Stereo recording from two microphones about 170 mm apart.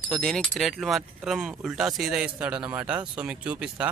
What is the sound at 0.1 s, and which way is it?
Speech, 5° left (ahead or behind).